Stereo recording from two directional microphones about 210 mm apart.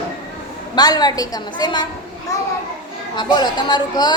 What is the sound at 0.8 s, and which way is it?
A woman's voice, 20° left (ahead or behind).